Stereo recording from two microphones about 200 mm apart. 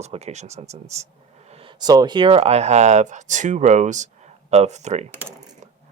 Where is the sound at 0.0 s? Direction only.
35° right (ahead or behind).